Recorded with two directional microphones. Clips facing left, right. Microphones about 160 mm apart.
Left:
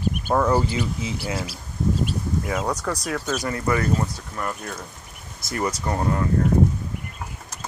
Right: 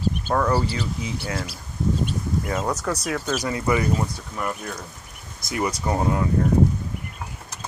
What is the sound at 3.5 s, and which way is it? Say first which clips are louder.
Speech: even; 15° right (ahead or behind).